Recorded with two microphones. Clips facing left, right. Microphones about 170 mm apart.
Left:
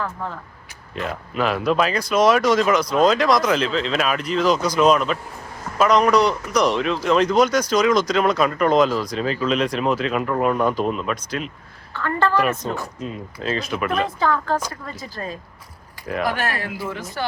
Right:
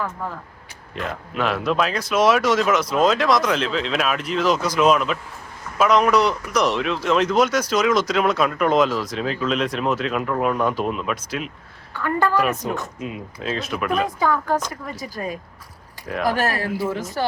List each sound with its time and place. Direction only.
0.9 s speech: centre (ahead or behind); by 12.9 s 20° right (ahead or behind)
13.0 s speech: 5° right (ahead or behind)
14.0 s speech: 10° right (ahead or behind)
16.2 s speech: 40° right (ahead or behind)